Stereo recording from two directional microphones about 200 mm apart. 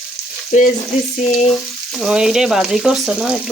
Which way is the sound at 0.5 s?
35° left (ahead or behind).